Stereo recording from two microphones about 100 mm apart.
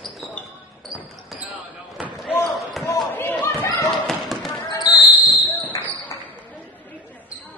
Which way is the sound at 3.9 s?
5° left (ahead or behind).